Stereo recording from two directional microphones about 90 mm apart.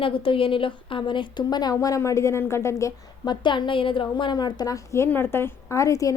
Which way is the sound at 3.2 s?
60° left (ahead or behind).